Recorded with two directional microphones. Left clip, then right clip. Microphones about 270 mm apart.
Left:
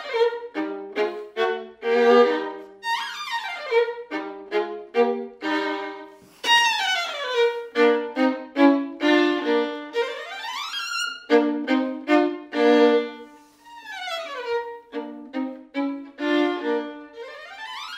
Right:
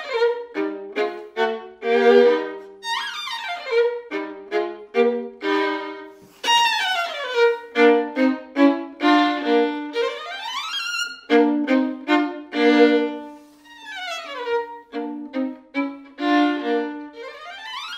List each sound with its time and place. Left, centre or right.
0.9 s violin: right
6.4 s music: right
15.3 s violin: right